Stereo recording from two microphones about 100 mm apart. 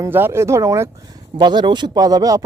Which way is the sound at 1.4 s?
50° right (ahead or behind).